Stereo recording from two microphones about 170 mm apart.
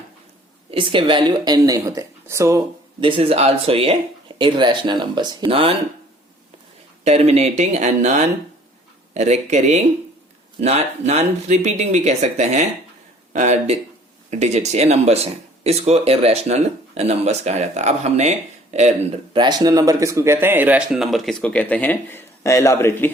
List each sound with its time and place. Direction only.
0.7 s speech: 30° right (ahead or behind)
3.0 s speech: 30° right (ahead or behind)
7.0 s speech: 40° right (ahead or behind); by 23.1 s 15° left (ahead or behind)